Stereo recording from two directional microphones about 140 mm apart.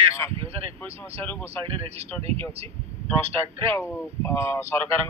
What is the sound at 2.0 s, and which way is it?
Speech, 45° right (ahead or behind).